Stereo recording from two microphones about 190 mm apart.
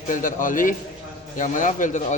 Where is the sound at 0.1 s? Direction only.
45° left (ahead or behind).